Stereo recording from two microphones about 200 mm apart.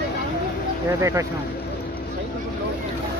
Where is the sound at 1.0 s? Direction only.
15° right (ahead or behind).